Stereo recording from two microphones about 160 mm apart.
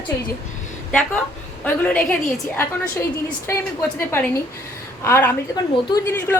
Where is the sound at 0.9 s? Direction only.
5° left (ahead or behind).